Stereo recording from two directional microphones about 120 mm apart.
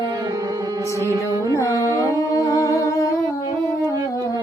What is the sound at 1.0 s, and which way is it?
Music, 25° right (ahead or behind).